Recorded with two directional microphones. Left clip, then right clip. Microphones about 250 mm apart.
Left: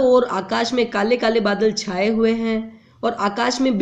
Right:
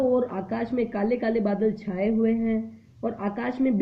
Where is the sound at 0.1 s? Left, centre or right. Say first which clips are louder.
Left 9 dB; centre.